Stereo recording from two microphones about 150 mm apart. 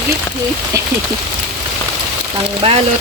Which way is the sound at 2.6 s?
40° right (ahead or behind).